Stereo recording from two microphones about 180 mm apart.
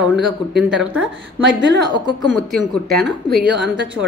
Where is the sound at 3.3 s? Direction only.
65° right (ahead or behind).